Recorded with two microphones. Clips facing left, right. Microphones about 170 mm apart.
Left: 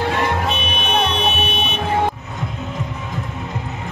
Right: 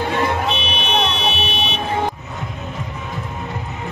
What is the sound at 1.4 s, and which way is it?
Car alarm, 55° left (ahead or behind).